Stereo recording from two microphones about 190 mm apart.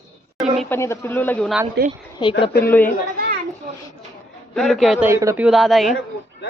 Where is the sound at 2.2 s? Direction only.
25° left (ahead or behind).